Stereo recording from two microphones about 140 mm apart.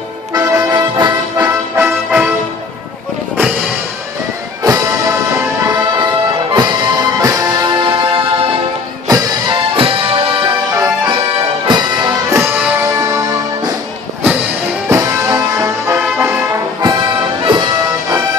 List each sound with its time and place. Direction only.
0.4 s music: 25° right (ahead or behind)
1.8 s music: 10° right (ahead or behind)
4.6 s music: 20° right (ahead or behind)
5.9 s music: 30° right (ahead or behind)
9.0 s music: 25° right (ahead or behind)
9.8 s music: 40° right (ahead or behind)
11.6 s music: 30° right (ahead or behind)
14.9 s music: 20° right (ahead or behind)
16.8 s music: 30° right (ahead or behind)